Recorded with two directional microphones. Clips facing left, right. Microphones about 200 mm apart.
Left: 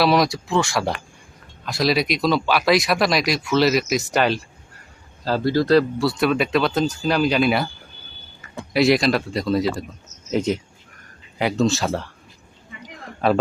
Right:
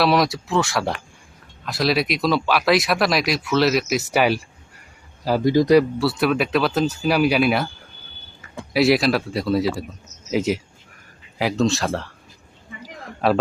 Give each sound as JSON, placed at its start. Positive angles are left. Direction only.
{"t": 0.0, "sound": "a man's voice", "side_deg": 0}
{"t": 6.0, "sound": "speech", "side_deg": -5}
{"t": 8.7, "sound": "speech", "side_deg": -5}
{"t": 12.8, "sound": "a sound", "side_deg": 0}